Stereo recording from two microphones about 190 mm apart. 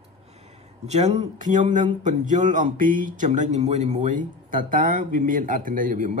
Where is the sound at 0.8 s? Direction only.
35° right (ahead or behind).